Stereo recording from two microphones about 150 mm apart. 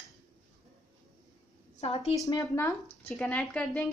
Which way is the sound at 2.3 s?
20° left (ahead or behind).